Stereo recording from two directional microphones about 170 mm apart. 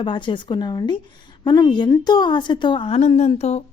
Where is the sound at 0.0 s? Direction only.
30° left (ahead or behind).